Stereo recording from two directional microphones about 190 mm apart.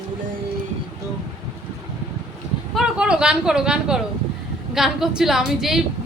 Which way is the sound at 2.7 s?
5° right (ahead or behind).